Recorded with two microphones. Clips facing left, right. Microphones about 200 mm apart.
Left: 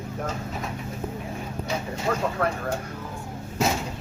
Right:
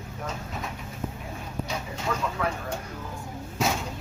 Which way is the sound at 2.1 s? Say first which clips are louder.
Left 4 dB; 50° left (ahead or behind).